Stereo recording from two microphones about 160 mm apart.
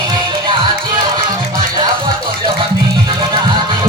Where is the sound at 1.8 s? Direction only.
25° right (ahead or behind).